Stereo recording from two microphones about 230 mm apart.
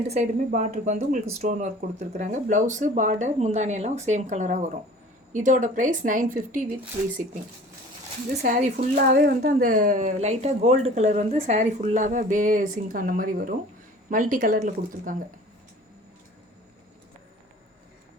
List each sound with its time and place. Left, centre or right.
0.1 s a woman's voice: right
8.4 s a woman's voice: right